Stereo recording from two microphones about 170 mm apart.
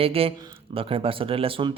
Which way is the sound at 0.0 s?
35° right (ahead or behind).